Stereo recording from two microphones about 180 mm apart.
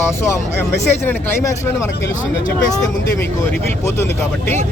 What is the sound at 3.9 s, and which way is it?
Speech, 15° left (ahead or behind).